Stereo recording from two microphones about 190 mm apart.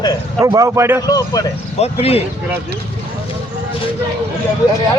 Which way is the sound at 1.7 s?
30° left (ahead or behind).